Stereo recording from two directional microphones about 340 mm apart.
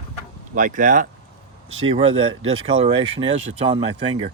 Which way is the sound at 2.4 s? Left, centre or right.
Right.